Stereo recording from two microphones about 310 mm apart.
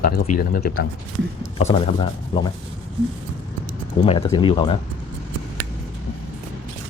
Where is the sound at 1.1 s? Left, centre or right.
Right.